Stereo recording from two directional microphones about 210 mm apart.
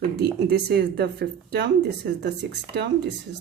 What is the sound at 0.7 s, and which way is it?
Speech, 50° right (ahead or behind).